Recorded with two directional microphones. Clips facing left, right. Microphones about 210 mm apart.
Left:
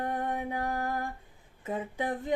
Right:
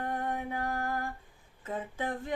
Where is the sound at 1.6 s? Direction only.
15° left (ahead or behind).